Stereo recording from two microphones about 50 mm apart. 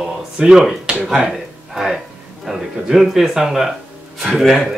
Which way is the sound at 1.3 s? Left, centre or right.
Centre.